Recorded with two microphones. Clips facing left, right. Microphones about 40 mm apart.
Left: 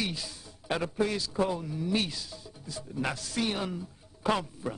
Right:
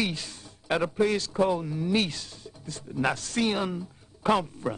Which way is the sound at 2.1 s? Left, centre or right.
Right.